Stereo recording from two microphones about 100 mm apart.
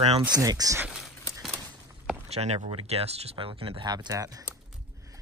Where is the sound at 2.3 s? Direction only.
90° right; by 3.8 s 70° right (ahead or behind).